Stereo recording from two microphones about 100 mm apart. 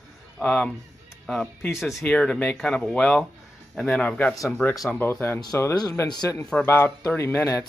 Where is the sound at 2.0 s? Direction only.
10° left (ahead or behind).